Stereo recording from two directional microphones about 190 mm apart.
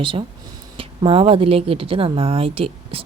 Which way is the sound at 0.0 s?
25° right (ahead or behind).